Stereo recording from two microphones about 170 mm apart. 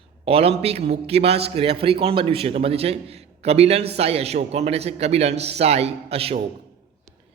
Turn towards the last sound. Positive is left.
turn(degrees=-35)  # may be behind; listen again after turning